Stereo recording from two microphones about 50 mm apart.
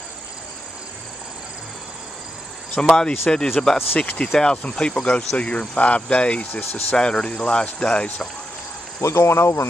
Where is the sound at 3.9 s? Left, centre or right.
Left.